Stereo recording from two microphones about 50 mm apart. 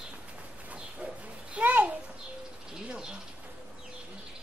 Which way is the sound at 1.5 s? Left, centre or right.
Right.